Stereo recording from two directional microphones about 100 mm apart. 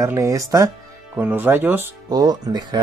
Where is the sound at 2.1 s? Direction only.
40° right (ahead or behind).